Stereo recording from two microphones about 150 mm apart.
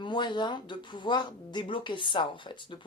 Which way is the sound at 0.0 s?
30° left (ahead or behind).